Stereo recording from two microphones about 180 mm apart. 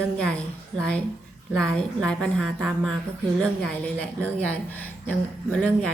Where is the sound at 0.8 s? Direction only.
5° left (ahead or behind).